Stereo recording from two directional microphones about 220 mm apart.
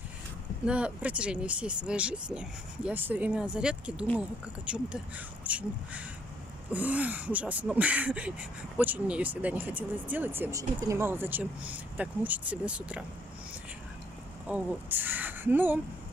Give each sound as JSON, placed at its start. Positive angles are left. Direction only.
{"t": 0.7, "sound": "speech", "side_deg": -5}
{"t": 14.5, "sound": "speech", "side_deg": -5}